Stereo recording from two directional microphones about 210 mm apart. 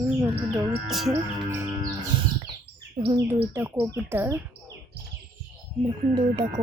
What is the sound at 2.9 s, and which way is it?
Speech, 20° right (ahead or behind).